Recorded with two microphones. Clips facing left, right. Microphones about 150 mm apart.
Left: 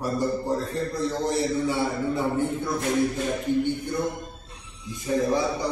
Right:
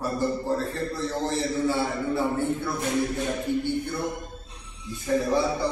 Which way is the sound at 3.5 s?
10° right (ahead or behind).